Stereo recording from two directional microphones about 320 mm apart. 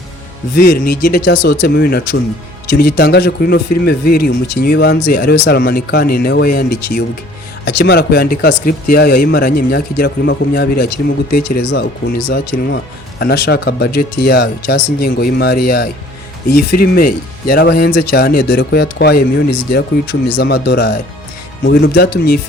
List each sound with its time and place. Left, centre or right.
0.5 s speech: left